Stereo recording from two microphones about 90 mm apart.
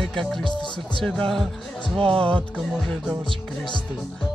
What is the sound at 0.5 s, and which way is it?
Speech, 60° left (ahead or behind).